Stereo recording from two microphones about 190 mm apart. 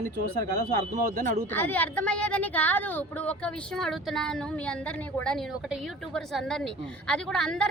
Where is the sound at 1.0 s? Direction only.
45° right (ahead or behind).